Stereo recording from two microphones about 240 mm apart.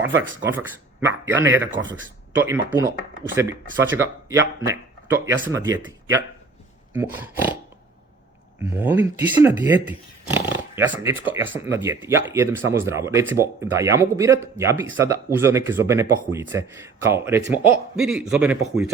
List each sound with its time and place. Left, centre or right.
0.0 s speech: right
0.4 s speech: centre
2.7 s speech: centre
6.9 s speech: centre
8.7 s speech: centre